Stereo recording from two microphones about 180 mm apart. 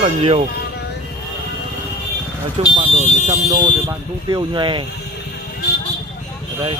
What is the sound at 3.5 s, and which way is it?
Speech, 20° right (ahead or behind).